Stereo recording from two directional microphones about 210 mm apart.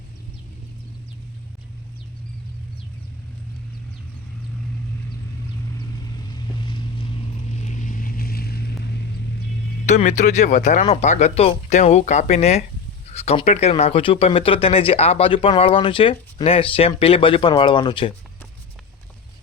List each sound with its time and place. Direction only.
6.3 s vehicle: 20° left (ahead or behind)
7.5 s vehicle: 35° left (ahead or behind); by 9.0 s 50° left (ahead or behind)
9.8 s speech: 35° left (ahead or behind)